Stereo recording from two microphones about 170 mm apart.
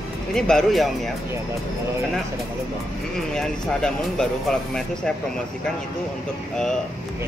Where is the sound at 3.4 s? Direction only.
5° left (ahead or behind).